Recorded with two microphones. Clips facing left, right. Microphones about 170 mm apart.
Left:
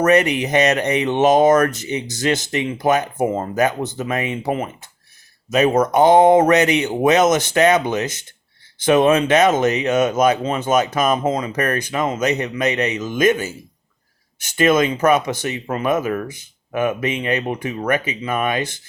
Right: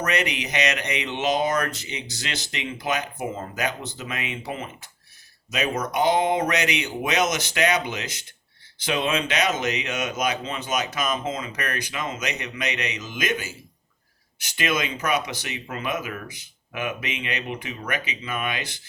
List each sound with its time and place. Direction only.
0.0 s speech: 50° left (ahead or behind)